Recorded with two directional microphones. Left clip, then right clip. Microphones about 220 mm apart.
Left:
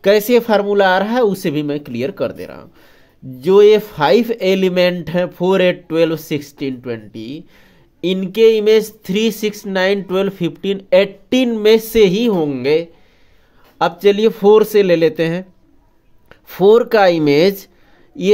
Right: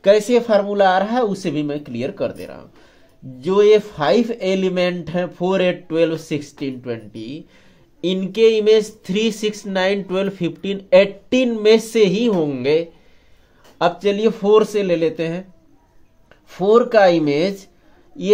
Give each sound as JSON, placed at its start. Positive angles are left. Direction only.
{"t": 0.0, "sound": "a man's voice", "side_deg": 40}
{"t": 13.7, "sound": "speech", "side_deg": 35}